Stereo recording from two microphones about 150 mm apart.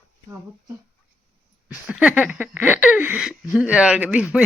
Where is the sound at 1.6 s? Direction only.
5° right (ahead or behind).